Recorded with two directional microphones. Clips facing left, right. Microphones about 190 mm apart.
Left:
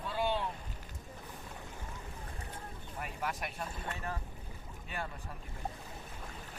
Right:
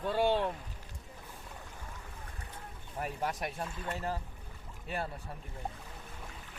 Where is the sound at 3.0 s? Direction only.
35° right (ahead or behind).